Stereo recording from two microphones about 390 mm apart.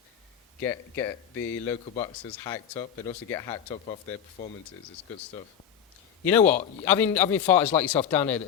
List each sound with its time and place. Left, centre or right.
0.6 s speech: centre
1.4 s a man's voice: left
1.6 s speech: centre
6.2 s a man's voice: centre